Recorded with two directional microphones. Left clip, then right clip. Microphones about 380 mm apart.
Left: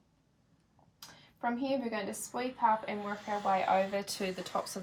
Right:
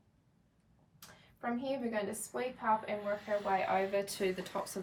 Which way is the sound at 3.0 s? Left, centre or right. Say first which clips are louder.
Even; centre.